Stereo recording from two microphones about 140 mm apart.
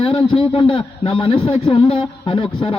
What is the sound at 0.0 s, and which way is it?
A man's voice, 40° left (ahead or behind).